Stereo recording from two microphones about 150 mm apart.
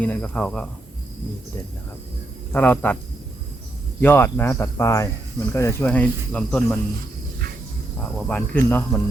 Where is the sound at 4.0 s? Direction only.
15° left (ahead or behind).